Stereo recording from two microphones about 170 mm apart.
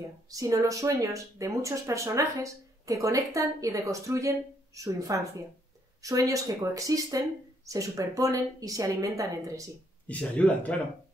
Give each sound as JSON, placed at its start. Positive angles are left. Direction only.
{"t": 0.3, "sound": "speech", "side_deg": -20}
{"t": 10.0, "sound": "speech", "side_deg": 10}